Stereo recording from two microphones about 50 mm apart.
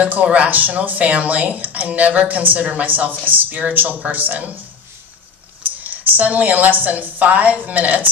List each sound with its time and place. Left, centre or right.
0.0 s speech: right
5.9 s speech: right